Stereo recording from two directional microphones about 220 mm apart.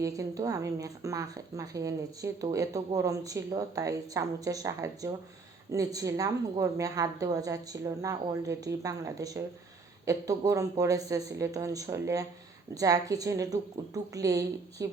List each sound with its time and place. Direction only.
0.0 s speech: 15° right (ahead or behind)